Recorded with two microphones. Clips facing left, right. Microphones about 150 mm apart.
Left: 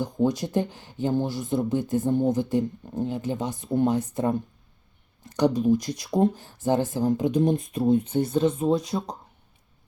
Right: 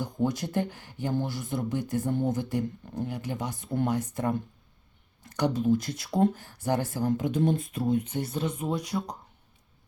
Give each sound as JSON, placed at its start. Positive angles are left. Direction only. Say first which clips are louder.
{"t": 0.0, "sound": "speech", "louder": "left 4 dB", "side_deg": 20}
{"t": 5.4, "sound": "speech", "louder": "left 4 dB", "side_deg": 15}